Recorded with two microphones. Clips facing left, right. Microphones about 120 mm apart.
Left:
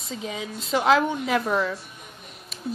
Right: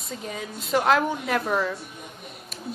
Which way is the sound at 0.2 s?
5° left (ahead or behind).